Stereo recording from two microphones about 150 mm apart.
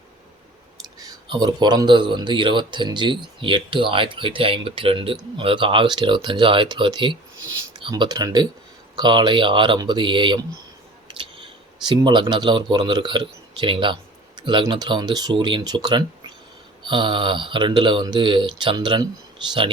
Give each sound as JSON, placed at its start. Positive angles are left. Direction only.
{"t": 0.9, "sound": "speech", "side_deg": -25}
{"t": 11.1, "sound": "a sound", "side_deg": -35}
{"t": 11.9, "sound": "speech", "side_deg": -30}